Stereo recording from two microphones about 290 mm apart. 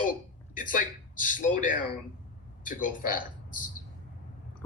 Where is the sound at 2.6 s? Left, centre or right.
Left.